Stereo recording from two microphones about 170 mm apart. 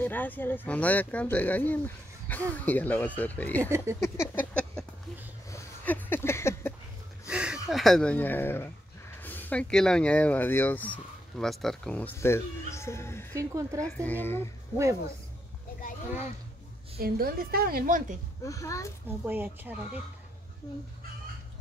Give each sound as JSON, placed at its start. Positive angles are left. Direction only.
{"t": 0.0, "sound": "speech", "side_deg": 10}
{"t": 3.7, "sound": "speech", "side_deg": -15}
{"t": 4.0, "sound": "speech", "side_deg": 15}
{"t": 5.5, "sound": "a sound", "side_deg": 10}
{"t": 7.2, "sound": "a sound", "side_deg": -5}
{"t": 7.7, "sound": "speech", "side_deg": 0}
{"t": 13.4, "sound": "speech", "side_deg": -20}
{"t": 13.9, "sound": "speech", "side_deg": 10}
{"t": 17.0, "sound": "a woman's voice", "side_deg": -60}
{"t": 18.4, "sound": "speech", "side_deg": 20}
{"t": 19.0, "sound": "speech", "side_deg": -10}